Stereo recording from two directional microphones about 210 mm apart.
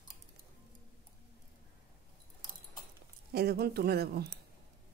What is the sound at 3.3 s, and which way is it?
Speech, 50° right (ahead or behind).